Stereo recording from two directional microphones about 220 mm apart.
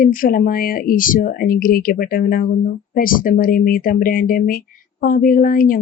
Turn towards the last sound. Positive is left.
turn(degrees=40)  # may be behind; listen again after turning